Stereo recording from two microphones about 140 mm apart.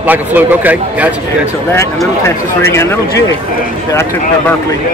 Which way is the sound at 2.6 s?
20° left (ahead or behind).